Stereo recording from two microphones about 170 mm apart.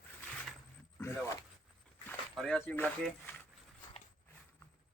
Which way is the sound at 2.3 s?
5° left (ahead or behind).